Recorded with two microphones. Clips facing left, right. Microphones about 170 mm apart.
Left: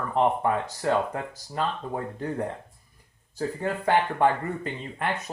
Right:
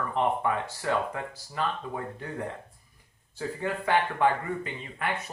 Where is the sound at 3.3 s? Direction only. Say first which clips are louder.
Left 3 dB; 45° left (ahead or behind).